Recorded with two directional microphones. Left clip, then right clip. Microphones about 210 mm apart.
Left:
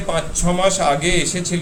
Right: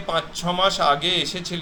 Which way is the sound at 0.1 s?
10° left (ahead or behind).